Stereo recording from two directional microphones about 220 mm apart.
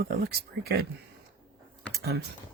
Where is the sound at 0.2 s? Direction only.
45° right (ahead or behind).